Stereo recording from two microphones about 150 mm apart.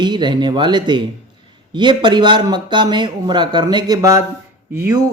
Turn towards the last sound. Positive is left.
turn(degrees=-20)  # may be behind; listen again after turning